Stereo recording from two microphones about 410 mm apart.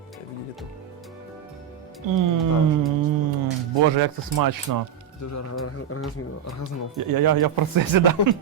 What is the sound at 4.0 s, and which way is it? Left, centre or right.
Speech, right.